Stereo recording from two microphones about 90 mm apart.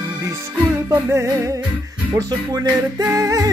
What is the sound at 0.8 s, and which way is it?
Music, 30° right (ahead or behind).